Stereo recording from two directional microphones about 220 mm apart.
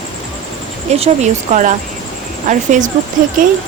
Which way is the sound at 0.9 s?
30° right (ahead or behind).